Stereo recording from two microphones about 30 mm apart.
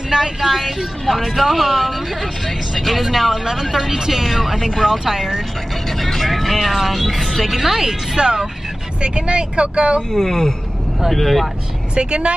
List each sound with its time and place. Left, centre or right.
0.1 s speech: centre
3.7 s speech: centre
5.9 s vehicle: centre
6.7 s speech: centre
8.2 s speech: right
9.0 s speech: right
10.1 s speech: centre
11.9 s speech: right